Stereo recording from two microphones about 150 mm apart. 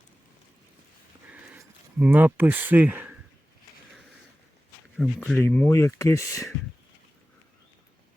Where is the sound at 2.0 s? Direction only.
10° right (ahead or behind).